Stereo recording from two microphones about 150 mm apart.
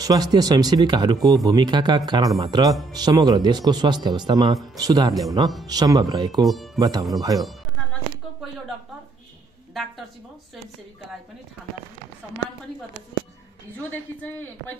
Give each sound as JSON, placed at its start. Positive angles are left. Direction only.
{"t": 0.0, "sound": "speech", "side_deg": -25}
{"t": 6.4, "sound": "speech", "side_deg": 0}
{"t": 6.8, "sound": "speech", "side_deg": -25}